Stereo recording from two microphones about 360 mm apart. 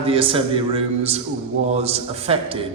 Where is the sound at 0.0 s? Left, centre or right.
Centre.